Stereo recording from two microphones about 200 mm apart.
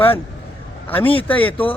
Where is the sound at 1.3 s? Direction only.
10° left (ahead or behind).